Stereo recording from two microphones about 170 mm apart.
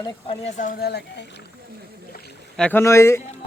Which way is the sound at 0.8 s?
70° left (ahead or behind).